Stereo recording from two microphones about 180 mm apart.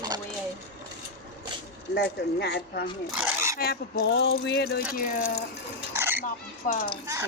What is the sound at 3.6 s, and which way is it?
Speech, 55° left (ahead or behind).